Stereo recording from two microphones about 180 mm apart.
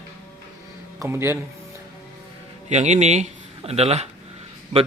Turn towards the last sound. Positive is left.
turn(degrees=-35)  # may be behind; listen again after turning